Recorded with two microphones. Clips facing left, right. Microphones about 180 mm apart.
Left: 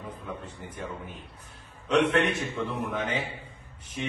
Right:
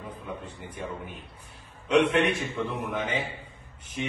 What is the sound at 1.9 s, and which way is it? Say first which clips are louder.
A man's voice: right 1 dB; 5° right (ahead or behind).